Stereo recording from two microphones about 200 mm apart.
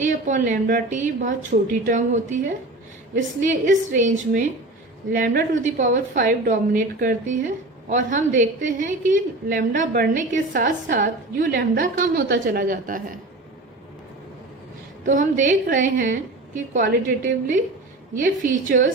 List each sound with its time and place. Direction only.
0.0 s a woman's voice: 40° right (ahead or behind)
15.0 s a woman's voice: 40° right (ahead or behind)
18.7 s a woman's voice: 45° right (ahead or behind)